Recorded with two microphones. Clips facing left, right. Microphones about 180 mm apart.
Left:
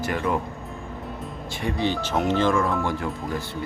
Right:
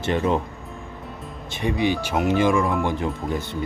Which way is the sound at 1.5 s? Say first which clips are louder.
Right 3 dB; 15° right (ahead or behind).